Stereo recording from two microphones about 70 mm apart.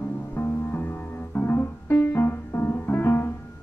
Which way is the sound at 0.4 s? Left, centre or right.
Left.